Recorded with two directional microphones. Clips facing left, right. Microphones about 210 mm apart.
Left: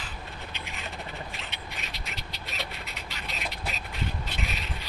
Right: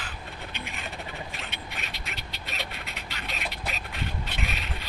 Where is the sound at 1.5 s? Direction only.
60° right (ahead or behind).